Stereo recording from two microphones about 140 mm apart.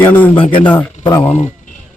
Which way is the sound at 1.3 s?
55° left (ahead or behind).